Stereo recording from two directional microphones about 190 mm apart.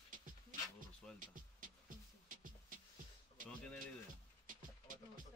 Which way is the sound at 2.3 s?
45° right (ahead or behind).